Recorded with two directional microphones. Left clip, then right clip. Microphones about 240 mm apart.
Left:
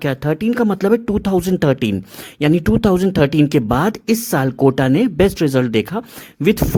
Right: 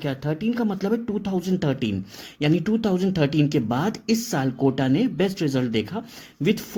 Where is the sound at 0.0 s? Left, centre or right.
Left.